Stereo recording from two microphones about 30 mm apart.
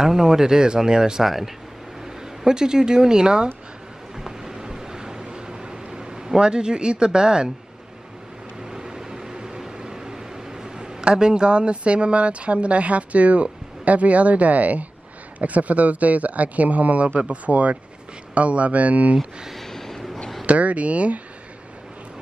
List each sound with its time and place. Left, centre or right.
0.0 s speech: centre
1.2 s speech: centre
2.0 s speech: right
4.2 s boat: centre
8.6 s microwave oven: centre
9.8 s speech: right
19.5 s a sound: centre
20.4 s speech: right